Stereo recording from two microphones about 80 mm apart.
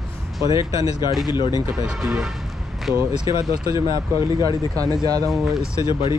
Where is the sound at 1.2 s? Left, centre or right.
Left.